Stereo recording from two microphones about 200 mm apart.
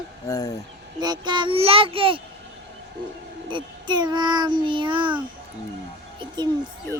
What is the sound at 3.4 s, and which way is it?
A child's voice, 25° right (ahead or behind).